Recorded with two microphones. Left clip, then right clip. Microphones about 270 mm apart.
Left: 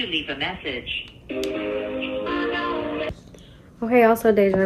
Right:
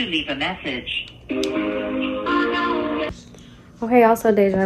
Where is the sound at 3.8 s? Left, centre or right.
Centre.